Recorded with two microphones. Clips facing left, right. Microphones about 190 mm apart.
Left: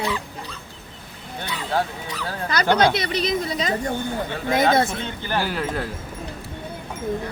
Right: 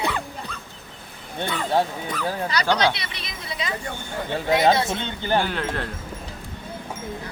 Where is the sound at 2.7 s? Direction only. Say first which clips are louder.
Left 5 dB; 50° left (ahead or behind).